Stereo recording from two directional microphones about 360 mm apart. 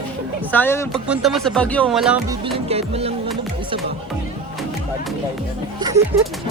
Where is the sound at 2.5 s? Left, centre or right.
Centre.